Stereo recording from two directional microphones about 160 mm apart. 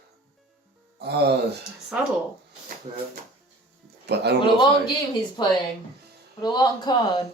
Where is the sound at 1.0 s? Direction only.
90° right.